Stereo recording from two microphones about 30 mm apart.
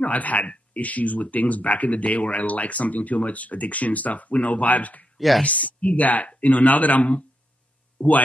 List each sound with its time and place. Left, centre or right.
0.0 s speech: left
5.1 s a sound: centre
5.4 s speech: left
8.0 s speech: left